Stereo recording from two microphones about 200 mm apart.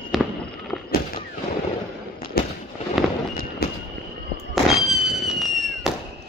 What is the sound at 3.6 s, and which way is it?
Fireworks, 50° left (ahead or behind).